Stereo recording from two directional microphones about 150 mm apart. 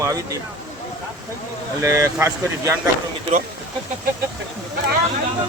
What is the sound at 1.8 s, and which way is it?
Speech, 20° right (ahead or behind).